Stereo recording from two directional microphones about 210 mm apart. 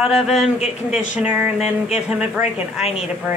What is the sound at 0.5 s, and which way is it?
Speech, 30° left (ahead or behind).